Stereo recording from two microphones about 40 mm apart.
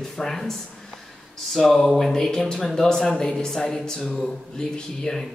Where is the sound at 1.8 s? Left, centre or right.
Centre.